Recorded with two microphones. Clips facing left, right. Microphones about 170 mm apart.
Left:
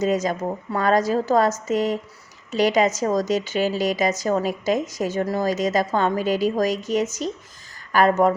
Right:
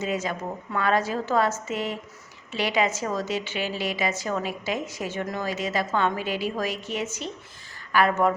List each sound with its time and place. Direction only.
0.0 s a woman's voice: 40° left (ahead or behind)